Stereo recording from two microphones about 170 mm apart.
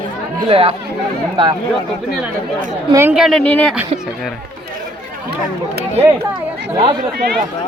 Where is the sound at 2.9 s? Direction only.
15° right (ahead or behind).